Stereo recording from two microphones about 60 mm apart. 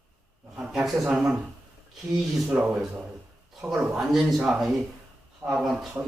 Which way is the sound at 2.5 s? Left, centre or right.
Right.